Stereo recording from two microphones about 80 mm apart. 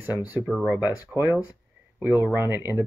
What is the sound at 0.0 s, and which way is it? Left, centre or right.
Speech, centre.